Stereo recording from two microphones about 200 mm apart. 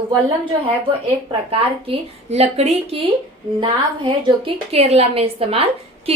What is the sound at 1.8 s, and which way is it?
A woman's voice, 30° right (ahead or behind).